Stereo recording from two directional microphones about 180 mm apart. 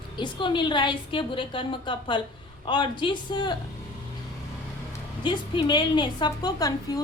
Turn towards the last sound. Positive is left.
turn(degrees=20)  # may be behind; listen again after turning